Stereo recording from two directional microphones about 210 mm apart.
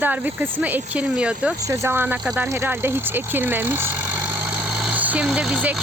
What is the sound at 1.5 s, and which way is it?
Vehicle, 15° right (ahead or behind).